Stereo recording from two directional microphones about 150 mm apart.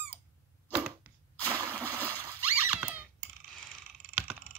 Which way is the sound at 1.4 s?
15° right (ahead or behind).